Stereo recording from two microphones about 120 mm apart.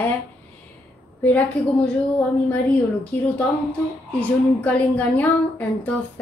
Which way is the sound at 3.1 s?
15° left (ahead or behind).